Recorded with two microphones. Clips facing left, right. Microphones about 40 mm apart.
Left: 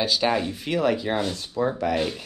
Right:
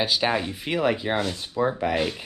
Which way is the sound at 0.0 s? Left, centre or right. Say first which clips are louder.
Left 1 dB; centre.